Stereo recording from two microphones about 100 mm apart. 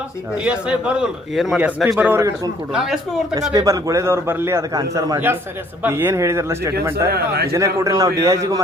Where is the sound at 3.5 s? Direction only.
35° right (ahead or behind).